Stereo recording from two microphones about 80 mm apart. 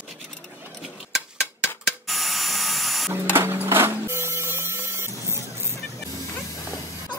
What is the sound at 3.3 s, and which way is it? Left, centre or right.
Printer, right.